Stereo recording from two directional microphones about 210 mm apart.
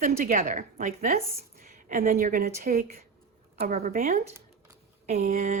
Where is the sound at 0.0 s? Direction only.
40° right (ahead or behind).